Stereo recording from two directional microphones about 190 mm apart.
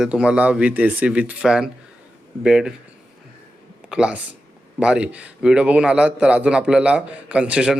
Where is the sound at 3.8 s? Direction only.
5° right (ahead or behind).